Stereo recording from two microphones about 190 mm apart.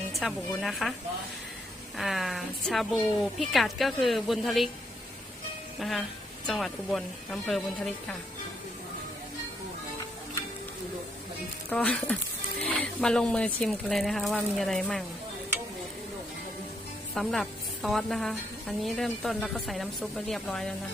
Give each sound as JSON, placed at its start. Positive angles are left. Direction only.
{"t": 0.1, "sound": "a woman's voice", "side_deg": 0}
{"t": 2.0, "sound": "a woman's voice", "side_deg": 0}
{"t": 5.8, "sound": "a woman's voice", "side_deg": 0}
{"t": 11.7, "sound": "a woman's voice", "side_deg": 5}
{"t": 17.2, "sound": "a woman's voice", "side_deg": 0}